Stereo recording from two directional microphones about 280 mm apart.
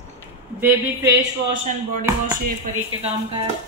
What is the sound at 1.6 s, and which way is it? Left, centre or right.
Speech, right.